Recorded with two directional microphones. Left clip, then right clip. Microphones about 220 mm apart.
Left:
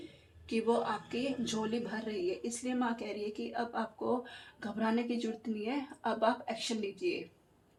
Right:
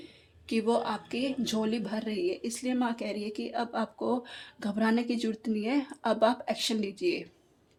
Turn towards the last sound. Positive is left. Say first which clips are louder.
# right 5 dB
turn(degrees=-50)  # may be behind; listen again after turning